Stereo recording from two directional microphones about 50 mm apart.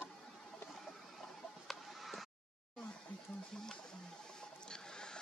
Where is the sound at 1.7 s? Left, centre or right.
Centre.